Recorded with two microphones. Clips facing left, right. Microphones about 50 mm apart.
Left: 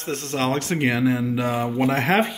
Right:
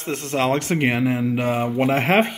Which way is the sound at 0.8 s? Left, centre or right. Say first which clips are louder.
Left 2 dB; right.